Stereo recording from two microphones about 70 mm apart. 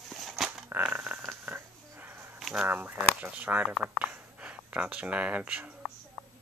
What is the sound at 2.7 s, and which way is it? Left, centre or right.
Speech, right.